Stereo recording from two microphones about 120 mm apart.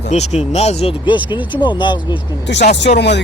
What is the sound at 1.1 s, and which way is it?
Speech, 40° left (ahead or behind).